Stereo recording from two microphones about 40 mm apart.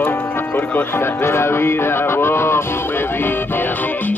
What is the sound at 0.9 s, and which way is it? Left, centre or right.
Music, left.